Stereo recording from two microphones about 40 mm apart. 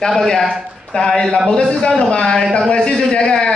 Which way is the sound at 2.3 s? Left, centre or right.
Centre.